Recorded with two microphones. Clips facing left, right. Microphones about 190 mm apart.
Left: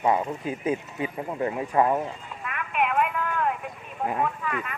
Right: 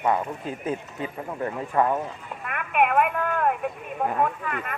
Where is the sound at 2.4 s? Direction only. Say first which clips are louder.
Right 4 dB; 55° right (ahead or behind).